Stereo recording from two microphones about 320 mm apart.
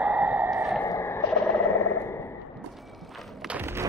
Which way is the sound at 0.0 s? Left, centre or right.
Centre.